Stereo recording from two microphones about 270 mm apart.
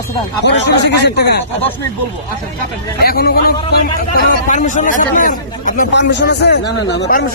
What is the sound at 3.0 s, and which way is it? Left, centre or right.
A man's voice, left.